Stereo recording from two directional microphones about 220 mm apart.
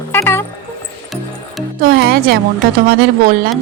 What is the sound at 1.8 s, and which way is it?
Speech, 45° right (ahead or behind).